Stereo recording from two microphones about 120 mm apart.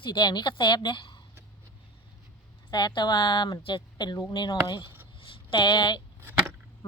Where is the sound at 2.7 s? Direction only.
40° left (ahead or behind).